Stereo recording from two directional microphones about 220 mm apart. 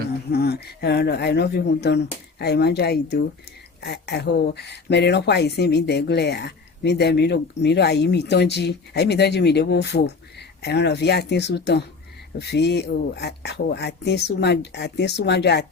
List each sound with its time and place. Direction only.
0.3 s speech: 45° left (ahead or behind)